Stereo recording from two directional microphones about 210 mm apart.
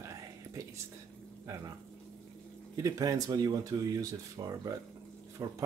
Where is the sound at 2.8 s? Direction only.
15° right (ahead or behind).